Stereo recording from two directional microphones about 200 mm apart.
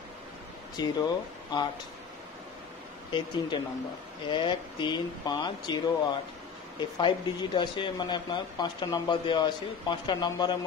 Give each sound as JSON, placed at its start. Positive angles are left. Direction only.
{"t": 0.7, "sound": "speech", "side_deg": 20}
{"t": 3.1, "sound": "speech", "side_deg": 25}
{"t": 6.8, "sound": "speech", "side_deg": 25}